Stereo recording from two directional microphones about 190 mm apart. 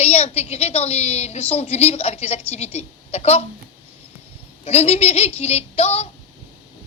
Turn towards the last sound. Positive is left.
turn(degrees=35)  # may be behind; listen again after turning